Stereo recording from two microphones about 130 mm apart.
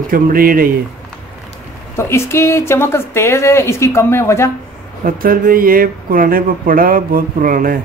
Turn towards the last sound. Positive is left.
turn(degrees=-90)